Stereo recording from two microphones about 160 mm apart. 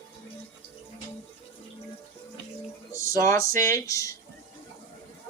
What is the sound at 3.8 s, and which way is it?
Speech, 20° left (ahead or behind).